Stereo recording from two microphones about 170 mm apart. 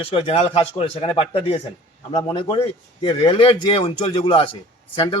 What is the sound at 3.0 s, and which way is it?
A man's voice, 35° left (ahead or behind).